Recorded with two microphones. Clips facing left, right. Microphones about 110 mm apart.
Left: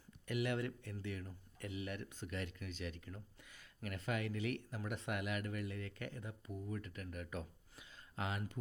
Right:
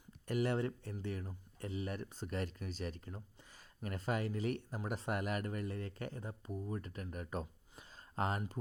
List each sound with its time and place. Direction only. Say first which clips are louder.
0.3 s speech: right 4 dB; 35° right (ahead or behind)